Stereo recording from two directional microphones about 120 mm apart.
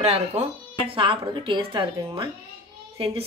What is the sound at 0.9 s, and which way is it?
Speech, 45° right (ahead or behind).